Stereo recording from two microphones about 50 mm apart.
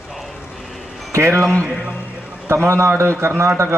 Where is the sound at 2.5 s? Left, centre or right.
Right.